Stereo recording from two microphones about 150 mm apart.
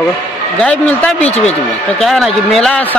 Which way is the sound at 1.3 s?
45° left (ahead or behind).